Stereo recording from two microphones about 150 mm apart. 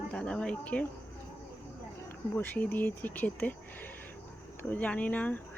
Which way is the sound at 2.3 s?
10° left (ahead or behind).